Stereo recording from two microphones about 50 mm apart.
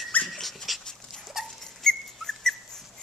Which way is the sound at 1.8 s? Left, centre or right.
Centre.